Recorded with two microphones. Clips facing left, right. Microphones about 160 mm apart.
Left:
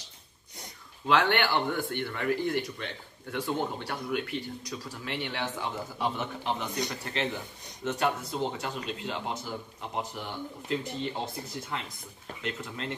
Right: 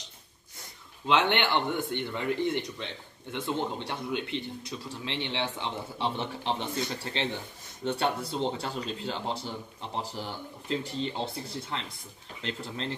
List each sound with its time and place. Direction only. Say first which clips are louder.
1.0 s a man's voice: even; 20° right (ahead or behind)
10.9 s speech: right 1 dB; 5° left (ahead or behind)
11.4 s a man's voice: even; 30° right (ahead or behind)